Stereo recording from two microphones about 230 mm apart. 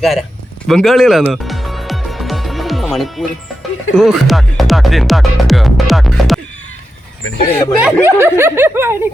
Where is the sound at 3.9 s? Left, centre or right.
Centre.